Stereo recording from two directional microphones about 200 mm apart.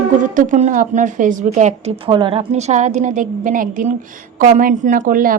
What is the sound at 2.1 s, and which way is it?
A woman's voice, 25° right (ahead or behind).